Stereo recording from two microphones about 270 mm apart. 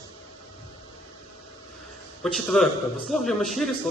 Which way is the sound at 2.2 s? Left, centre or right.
Centre.